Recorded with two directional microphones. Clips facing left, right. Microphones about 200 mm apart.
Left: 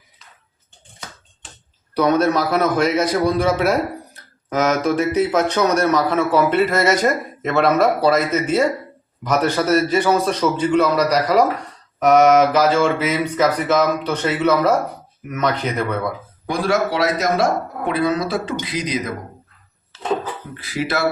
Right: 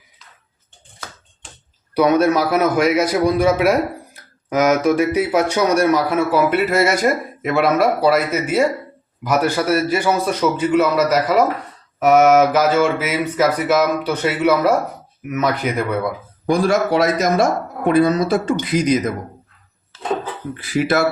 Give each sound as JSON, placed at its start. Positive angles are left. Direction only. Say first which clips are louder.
{"t": 2.0, "sound": "a man's voice", "louder": "right 2 dB", "side_deg": -10}
{"t": 16.5, "sound": "speech", "louder": "right 3 dB", "side_deg": -45}
{"t": 20.6, "sound": "speech", "louder": "right 5 dB", "side_deg": -50}